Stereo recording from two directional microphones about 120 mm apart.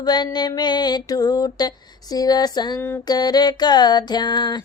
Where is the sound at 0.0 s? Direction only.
35° left (ahead or behind).